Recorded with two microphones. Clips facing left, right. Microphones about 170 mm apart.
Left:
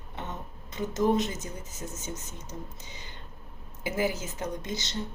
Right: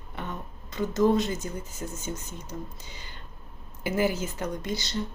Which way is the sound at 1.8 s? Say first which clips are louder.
Right 2 dB; centre (ahead or behind).